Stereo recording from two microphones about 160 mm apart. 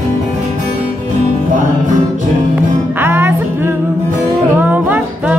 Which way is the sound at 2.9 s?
15° right (ahead or behind).